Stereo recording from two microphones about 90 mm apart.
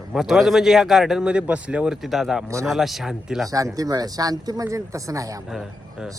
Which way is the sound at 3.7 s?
45° right (ahead or behind).